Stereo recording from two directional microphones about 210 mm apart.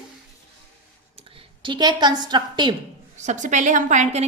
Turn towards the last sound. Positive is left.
turn(degrees=-35)  # may be behind; listen again after turning